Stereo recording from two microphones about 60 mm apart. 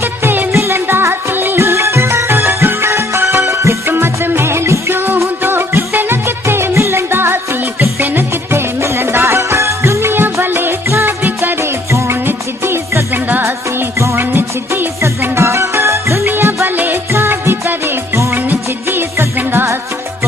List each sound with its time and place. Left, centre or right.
0.2 s music: right
0.5 s music: right
1.6 s music: right
3.9 s music: right
15.3 s music: right
16.7 s music: right
17.1 s music: right